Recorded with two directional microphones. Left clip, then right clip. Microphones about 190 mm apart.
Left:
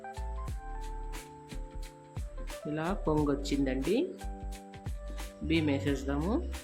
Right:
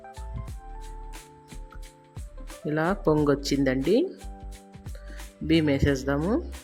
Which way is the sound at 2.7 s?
35° right (ahead or behind).